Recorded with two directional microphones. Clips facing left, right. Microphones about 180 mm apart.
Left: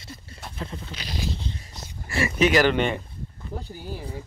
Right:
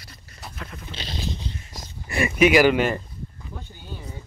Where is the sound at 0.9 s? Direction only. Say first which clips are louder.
Right 1 dB; 25° right (ahead or behind).